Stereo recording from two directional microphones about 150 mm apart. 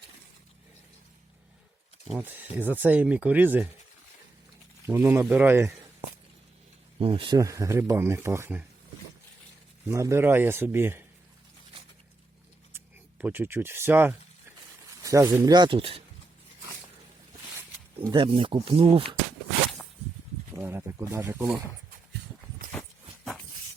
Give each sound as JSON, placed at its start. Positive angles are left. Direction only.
{"t": 2.1, "sound": "speech", "side_deg": -10}
{"t": 4.9, "sound": "speech", "side_deg": -15}
{"t": 7.0, "sound": "speech", "side_deg": -35}
{"t": 7.3, "sound": "speech", "side_deg": -20}
{"t": 9.9, "sound": "speech", "side_deg": -20}
{"t": 12.7, "sound": "speech", "side_deg": -10}
{"t": 18.0, "sound": "speech", "side_deg": -30}
{"t": 20.6, "sound": "a sound", "side_deg": -15}